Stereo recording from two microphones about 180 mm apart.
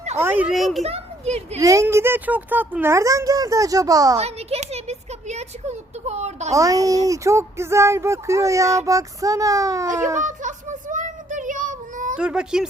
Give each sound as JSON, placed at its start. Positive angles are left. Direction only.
{"t": 0.2, "sound": "a child's voice", "side_deg": -10}
{"t": 0.8, "sound": "a child's voice", "side_deg": -35}
{"t": 1.5, "sound": "speech", "side_deg": -20}
{"t": 4.2, "sound": "speech", "side_deg": -35}
{"t": 6.5, "sound": "speech", "side_deg": -20}
{"t": 9.8, "sound": "a child's voice", "side_deg": -45}
{"t": 10.2, "sound": "child singing", "side_deg": -45}
{"t": 12.1, "sound": "a child's voice", "side_deg": -5}